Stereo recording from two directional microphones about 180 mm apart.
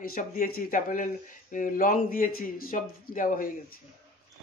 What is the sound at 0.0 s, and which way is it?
A man's voice, 55° left (ahead or behind).